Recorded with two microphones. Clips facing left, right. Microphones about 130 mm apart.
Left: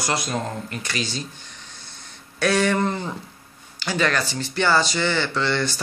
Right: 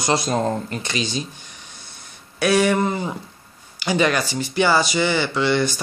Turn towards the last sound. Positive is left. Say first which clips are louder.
# right 4 dB
turn(degrees=-15)  # may be behind; listen again after turning